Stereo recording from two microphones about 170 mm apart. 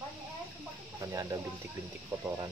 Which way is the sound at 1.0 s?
20° right (ahead or behind).